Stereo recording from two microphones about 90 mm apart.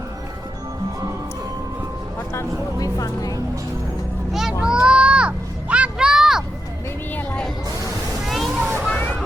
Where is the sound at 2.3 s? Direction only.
40° left (ahead or behind).